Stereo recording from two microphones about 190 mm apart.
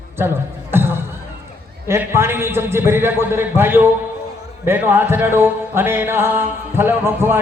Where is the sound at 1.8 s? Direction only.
15° right (ahead or behind).